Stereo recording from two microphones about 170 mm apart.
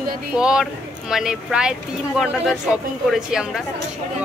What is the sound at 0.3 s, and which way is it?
A woman's voice, 5° right (ahead or behind).